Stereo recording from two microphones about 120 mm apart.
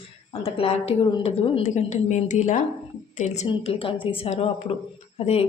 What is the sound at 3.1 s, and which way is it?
Speech, 70° left (ahead or behind).